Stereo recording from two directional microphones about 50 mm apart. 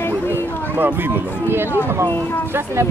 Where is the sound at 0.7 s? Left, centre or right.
Right.